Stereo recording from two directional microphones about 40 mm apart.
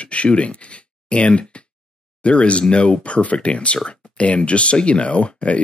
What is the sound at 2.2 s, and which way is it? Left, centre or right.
Speech, left.